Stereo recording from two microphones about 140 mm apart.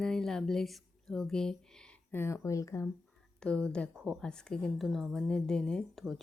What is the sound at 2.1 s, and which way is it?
Speech, 20° left (ahead or behind).